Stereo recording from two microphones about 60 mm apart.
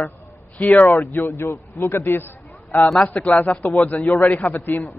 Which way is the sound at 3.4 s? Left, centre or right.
Left.